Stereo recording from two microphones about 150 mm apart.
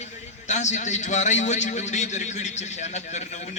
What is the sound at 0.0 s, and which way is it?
A man's voice, 50° left (ahead or behind).